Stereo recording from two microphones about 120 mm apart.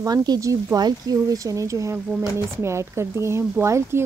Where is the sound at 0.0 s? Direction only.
35° right (ahead or behind).